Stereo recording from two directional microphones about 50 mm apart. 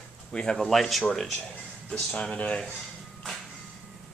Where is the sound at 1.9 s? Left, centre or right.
Centre.